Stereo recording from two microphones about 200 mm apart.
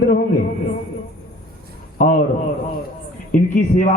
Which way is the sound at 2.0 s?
40° left (ahead or behind).